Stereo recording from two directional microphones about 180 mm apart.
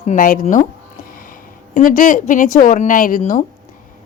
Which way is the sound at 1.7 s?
50° left (ahead or behind).